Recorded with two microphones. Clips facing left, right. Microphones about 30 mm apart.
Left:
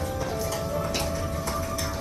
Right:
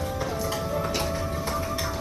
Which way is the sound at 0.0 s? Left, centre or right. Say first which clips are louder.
Right 1 dB; centre.